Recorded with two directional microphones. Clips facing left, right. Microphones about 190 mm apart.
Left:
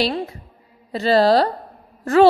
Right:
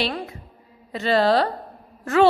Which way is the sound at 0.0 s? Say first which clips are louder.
Left 5 dB; 35° left (ahead or behind).